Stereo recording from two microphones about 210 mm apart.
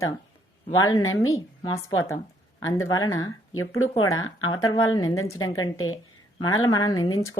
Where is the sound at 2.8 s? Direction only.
15° left (ahead or behind).